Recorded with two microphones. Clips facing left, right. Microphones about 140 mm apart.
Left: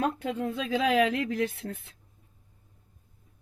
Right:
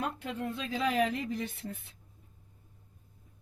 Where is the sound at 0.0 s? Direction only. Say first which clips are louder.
Left 6 dB; 90° left.